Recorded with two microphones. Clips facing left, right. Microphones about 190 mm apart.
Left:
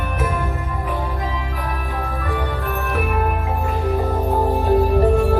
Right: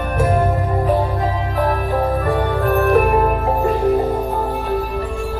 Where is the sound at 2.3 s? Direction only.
50° right (ahead or behind).